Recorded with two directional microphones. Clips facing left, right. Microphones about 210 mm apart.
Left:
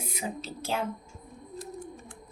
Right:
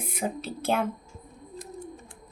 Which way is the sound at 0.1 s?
55° right (ahead or behind).